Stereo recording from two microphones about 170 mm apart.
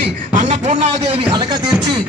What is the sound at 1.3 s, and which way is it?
Speech, 25° right (ahead or behind).